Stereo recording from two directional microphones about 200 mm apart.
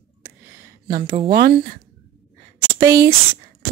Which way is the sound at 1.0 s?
20° right (ahead or behind).